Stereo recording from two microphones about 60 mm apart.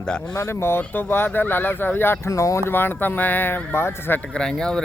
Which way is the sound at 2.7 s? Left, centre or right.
Left.